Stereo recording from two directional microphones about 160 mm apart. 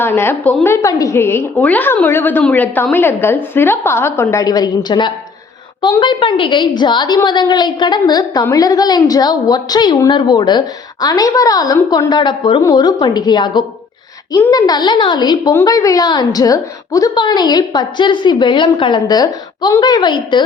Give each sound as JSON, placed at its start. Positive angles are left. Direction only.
{"t": 0.0, "sound": "a woman's voice", "side_deg": 15}
{"t": 4.4, "sound": "a woman's voice", "side_deg": 25}